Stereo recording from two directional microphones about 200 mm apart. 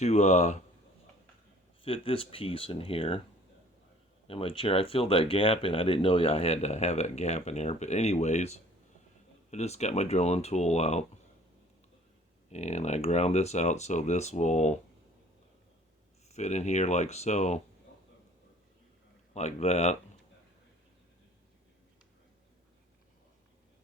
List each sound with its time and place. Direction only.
0.0 s speech: 35° left (ahead or behind)
1.8 s speech: 25° left (ahead or behind)
4.3 s speech: 30° left (ahead or behind)
12.5 s speech: 35° left (ahead or behind)
16.3 s speech: 35° left (ahead or behind)
19.3 s speech: 35° left (ahead or behind)